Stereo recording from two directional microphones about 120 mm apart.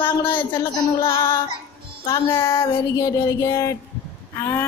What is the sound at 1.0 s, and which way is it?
Child singing, 30° left (ahead or behind).